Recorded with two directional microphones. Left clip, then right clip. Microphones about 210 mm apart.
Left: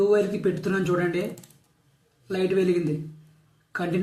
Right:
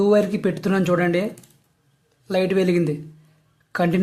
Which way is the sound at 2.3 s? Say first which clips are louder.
Right 4 dB; 55° right (ahead or behind).